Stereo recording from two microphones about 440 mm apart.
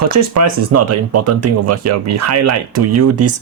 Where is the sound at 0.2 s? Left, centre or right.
Right.